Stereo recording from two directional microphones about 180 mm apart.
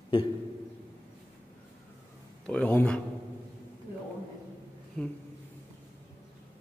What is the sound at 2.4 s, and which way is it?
Speech, 5° left (ahead or behind).